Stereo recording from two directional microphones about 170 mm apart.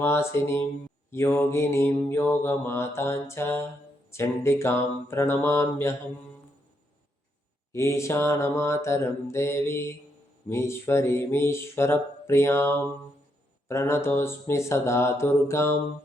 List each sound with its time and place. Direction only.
0.0 s mantra: 15° left (ahead or behind)
7.7 s mantra: 15° left (ahead or behind)